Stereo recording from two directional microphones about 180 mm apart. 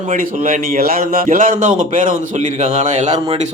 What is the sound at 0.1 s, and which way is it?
A man's voice, 45° right (ahead or behind).